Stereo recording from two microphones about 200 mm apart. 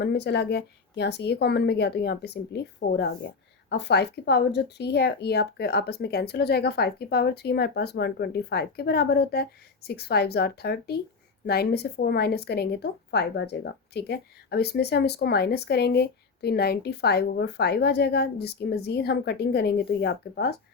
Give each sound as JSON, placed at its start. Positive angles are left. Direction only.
{"t": 0.0, "sound": "speech", "side_deg": 55}